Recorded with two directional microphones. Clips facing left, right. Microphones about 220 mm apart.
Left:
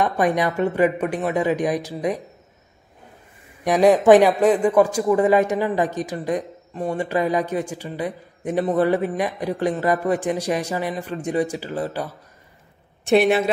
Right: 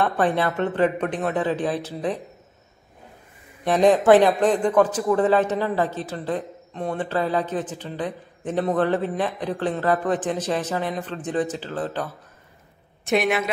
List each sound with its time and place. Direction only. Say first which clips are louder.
0.0 s speech: left 1 dB; 15° left (ahead or behind)
3.6 s speech: left 2 dB; 10° left (ahead or behind)
13.0 s a woman's voice: left 5 dB; 30° left (ahead or behind)